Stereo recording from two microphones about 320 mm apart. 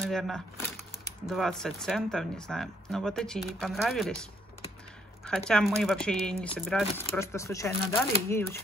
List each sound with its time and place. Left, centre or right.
0.0 s speech: centre